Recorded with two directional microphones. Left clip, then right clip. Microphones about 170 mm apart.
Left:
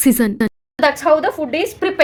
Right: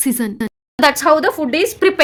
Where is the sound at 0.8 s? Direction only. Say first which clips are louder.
Right 1 dB; 35° right (ahead or behind).